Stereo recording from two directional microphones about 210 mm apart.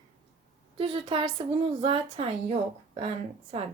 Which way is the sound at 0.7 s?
25° right (ahead or behind).